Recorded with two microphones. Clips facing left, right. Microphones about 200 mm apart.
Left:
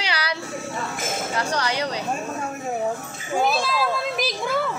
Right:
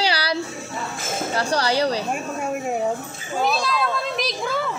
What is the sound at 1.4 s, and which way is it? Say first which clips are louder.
Chink: right 5 dB; 35° right (ahead or behind).